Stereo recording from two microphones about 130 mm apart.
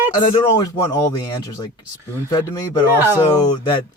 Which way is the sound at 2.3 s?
30° left (ahead or behind).